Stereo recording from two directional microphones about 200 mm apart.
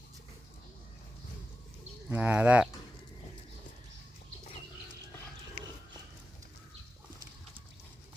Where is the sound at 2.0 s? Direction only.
10° right (ahead or behind).